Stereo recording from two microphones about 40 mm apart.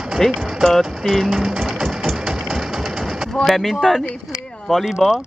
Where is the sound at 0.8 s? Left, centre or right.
Centre.